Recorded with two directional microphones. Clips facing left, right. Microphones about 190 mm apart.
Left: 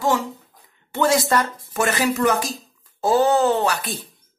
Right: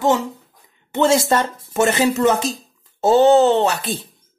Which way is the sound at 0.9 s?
25° right (ahead or behind).